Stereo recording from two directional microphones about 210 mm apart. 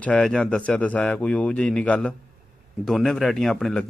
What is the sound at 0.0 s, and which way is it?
A man's voice, 5° left (ahead or behind).